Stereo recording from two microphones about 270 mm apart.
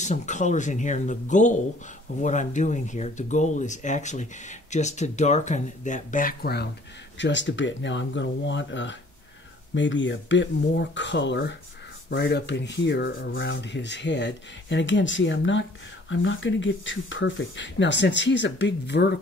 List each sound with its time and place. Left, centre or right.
0.0 s speech: left